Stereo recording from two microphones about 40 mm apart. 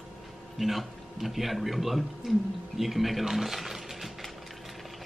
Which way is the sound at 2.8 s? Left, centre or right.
Centre.